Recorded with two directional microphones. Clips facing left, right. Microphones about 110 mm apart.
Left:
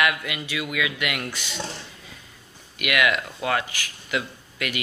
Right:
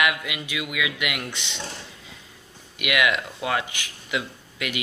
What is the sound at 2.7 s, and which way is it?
Speech, 15° right (ahead or behind).